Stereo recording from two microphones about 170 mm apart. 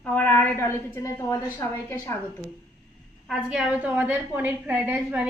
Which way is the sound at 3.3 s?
5° right (ahead or behind).